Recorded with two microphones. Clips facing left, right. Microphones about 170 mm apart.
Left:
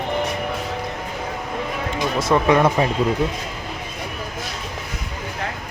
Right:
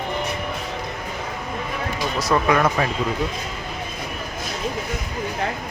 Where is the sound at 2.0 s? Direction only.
25° left (ahead or behind).